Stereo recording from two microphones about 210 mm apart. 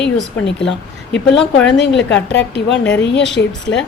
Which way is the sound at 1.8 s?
55° left (ahead or behind).